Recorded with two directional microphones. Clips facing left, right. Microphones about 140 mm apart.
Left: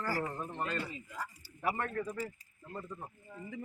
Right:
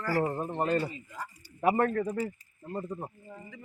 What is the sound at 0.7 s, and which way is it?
Speech, 45° right (ahead or behind).